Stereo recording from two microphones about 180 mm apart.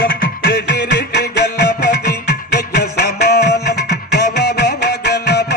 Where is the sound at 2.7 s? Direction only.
60° left (ahead or behind).